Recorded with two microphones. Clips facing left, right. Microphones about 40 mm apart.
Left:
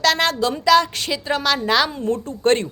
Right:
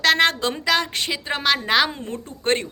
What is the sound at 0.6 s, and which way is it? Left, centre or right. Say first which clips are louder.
A woman's voice: left 7 dB; centre.